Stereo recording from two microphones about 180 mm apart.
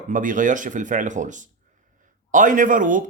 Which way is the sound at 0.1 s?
45° right (ahead or behind).